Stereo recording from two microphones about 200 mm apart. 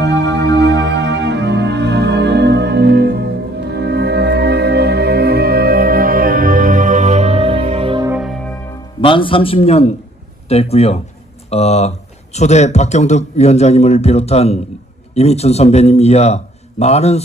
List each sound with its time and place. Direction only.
0.0 s music: 60° right (ahead or behind); by 8.1 s 25° right (ahead or behind)
8.1 s music: centre (ahead or behind)
9.0 s a man's voice: 25° left (ahead or behind)